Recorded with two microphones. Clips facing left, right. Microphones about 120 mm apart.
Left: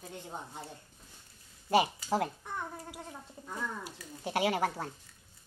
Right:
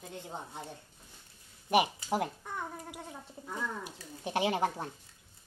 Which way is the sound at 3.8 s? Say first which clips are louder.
Even; 20° right (ahead or behind).